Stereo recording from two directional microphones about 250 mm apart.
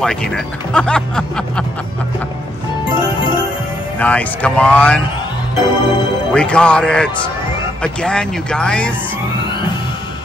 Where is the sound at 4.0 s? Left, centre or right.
Centre.